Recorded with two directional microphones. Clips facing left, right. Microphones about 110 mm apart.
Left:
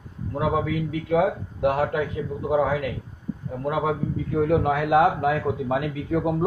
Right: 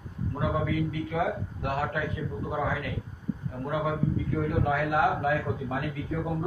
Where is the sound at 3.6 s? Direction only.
75° left (ahead or behind).